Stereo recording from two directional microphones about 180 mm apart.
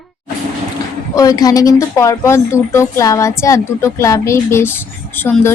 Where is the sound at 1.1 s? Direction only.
20° left (ahead or behind).